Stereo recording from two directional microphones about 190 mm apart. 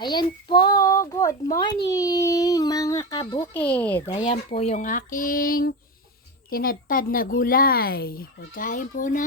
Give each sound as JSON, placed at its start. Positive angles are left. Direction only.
{"t": 0.0, "sound": "a child's voice", "side_deg": 25}
{"t": 3.4, "sound": "speech", "side_deg": 10}
{"t": 4.2, "sound": "speech", "side_deg": 30}